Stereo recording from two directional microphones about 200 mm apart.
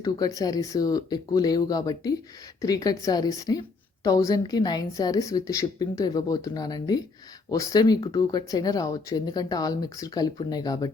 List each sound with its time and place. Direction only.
0.0 s a woman's voice: 20° left (ahead or behind)